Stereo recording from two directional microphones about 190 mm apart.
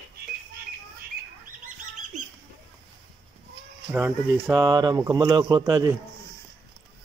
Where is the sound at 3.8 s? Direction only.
10° right (ahead or behind).